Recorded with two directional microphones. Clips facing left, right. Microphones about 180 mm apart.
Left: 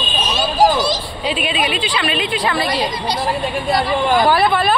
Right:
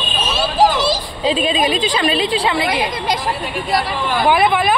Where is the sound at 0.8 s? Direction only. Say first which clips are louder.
Right 1 dB; 30° right (ahead or behind).